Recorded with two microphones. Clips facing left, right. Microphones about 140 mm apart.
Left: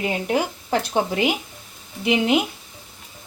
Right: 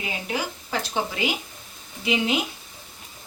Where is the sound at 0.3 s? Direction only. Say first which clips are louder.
Left 6 dB; 55° left (ahead or behind).